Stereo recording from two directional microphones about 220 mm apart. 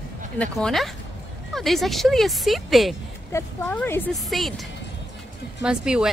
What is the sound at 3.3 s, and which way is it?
Speech, 10° left (ahead or behind).